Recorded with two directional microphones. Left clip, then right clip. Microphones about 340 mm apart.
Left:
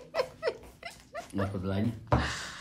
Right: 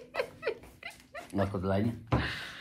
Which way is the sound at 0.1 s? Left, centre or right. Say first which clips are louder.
Left 3 dB; centre.